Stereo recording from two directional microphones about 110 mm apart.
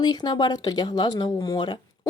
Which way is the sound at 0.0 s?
40° left (ahead or behind).